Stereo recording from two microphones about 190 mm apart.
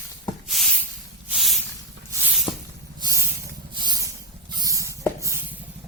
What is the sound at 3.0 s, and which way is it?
Spray, 20° right (ahead or behind).